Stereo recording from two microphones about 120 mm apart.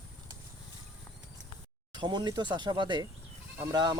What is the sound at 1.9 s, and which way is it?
Speech, 40° right (ahead or behind).